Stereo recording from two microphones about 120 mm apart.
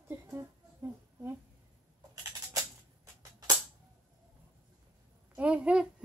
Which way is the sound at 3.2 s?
35° right (ahead or behind).